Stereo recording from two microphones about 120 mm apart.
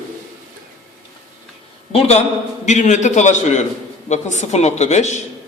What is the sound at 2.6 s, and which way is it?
A man's voice, 80° left.